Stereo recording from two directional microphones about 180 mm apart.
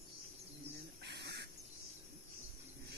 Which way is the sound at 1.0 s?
65° right (ahead or behind).